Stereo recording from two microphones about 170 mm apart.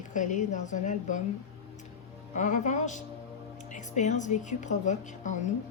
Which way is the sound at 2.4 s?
45° left (ahead or behind).